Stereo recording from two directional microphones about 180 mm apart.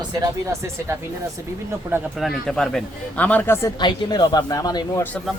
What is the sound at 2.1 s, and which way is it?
Speech, centre (ahead or behind).